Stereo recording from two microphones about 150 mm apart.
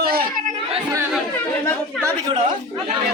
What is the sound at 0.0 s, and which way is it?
Chatter, 80° right.